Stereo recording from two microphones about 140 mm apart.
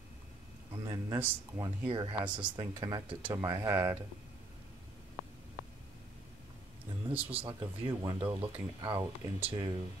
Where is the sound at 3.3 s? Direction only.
15° right (ahead or behind).